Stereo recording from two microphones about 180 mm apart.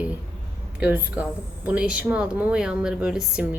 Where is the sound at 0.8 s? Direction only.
10° right (ahead or behind).